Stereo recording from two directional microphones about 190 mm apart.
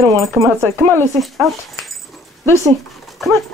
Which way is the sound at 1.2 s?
Centre (ahead or behind).